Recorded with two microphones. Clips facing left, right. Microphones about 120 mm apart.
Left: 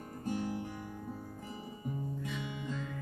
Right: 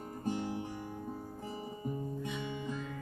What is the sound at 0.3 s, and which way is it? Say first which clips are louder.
Music: even; 25° right (ahead or behind).